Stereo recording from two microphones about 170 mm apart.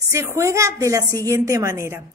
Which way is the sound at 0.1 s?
15° right (ahead or behind).